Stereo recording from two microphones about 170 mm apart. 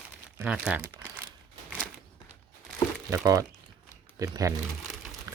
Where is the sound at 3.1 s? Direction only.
20° right (ahead or behind).